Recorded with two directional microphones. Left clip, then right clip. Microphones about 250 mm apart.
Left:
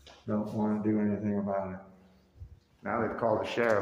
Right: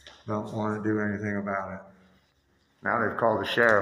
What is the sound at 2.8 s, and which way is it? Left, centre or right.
Speech, centre.